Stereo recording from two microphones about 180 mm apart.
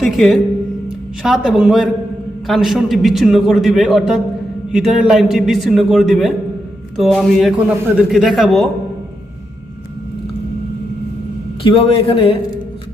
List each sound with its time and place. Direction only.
0.0 s a man's voice: centre (ahead or behind)
11.6 s a man's voice: 30° left (ahead or behind)